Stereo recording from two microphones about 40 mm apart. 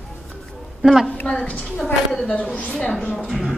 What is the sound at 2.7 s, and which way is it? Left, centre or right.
Speech, left.